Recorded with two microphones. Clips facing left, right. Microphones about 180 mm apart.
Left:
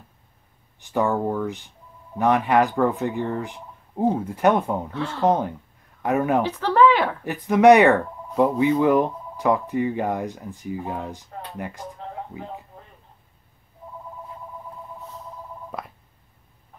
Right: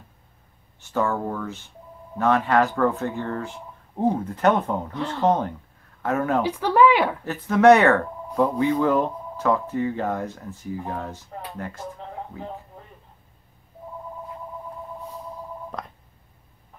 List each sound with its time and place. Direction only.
0.7 s speech: 15° left (ahead or behind)
6.4 s speech: 10° right (ahead or behind)
7.2 s speech: 15° left (ahead or behind)
15.7 s telephone dialing: 5° left (ahead or behind)